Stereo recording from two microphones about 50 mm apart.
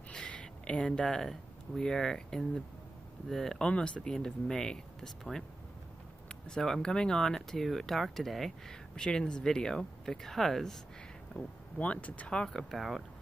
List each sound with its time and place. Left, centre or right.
0.1 s a sound: centre
1.8 s speech: centre
3.6 s speech: left
6.2 s a sound: centre
6.6 s speech: centre
8.9 s speech: centre
11.4 s speech: left
12.3 s speech: centre
12.7 s speech: centre